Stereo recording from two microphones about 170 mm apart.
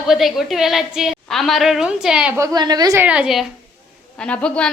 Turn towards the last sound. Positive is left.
turn(degrees=5)  # may be behind; listen again after turning